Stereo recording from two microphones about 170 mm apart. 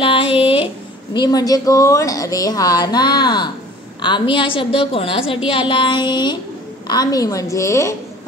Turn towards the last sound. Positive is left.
turn(degrees=15)  # may be behind; listen again after turning